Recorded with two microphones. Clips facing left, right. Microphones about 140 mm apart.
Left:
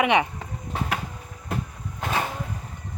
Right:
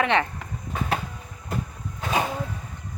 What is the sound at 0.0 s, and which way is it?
Speech, 15° left (ahead or behind).